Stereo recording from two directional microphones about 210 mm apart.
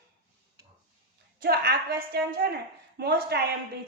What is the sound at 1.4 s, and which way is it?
A woman's voice, 45° right (ahead or behind).